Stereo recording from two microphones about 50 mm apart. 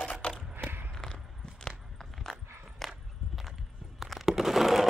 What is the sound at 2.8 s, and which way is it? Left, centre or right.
Walk, centre.